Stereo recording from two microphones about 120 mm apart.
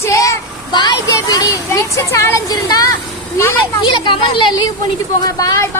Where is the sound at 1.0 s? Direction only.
30° left (ahead or behind).